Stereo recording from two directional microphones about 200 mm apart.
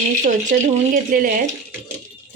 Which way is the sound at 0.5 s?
45° right (ahead or behind).